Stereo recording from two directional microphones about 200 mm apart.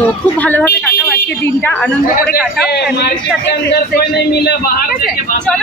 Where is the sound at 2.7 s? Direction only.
55° left (ahead or behind).